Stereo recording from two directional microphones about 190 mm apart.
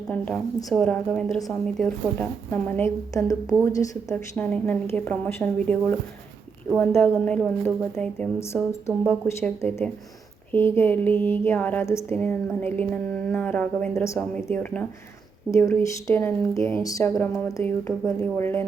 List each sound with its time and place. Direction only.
0.1 s a woman's voice: 5° left (ahead or behind)
4.1 s a woman's voice: 5° left (ahead or behind)